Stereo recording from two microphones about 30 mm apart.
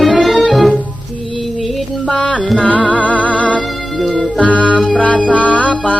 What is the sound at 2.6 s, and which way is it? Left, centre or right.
Music, left.